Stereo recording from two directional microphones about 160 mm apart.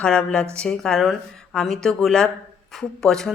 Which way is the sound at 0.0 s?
5° left (ahead or behind).